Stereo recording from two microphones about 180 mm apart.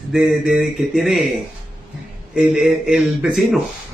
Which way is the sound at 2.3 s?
5° right (ahead or behind).